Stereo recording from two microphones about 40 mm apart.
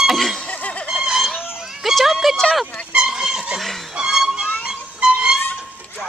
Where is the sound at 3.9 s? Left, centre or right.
Centre.